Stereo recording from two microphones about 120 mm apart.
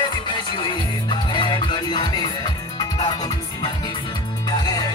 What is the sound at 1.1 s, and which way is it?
Music, 40° left (ahead or behind).